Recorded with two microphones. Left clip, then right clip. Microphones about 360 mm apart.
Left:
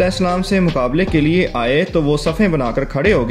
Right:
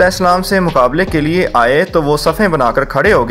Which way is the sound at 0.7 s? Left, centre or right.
Centre.